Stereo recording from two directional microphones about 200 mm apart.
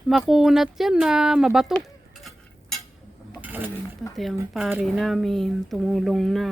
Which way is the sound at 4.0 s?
Centre (ahead or behind).